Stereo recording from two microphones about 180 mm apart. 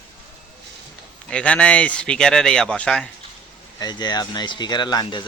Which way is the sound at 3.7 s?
25° left (ahead or behind).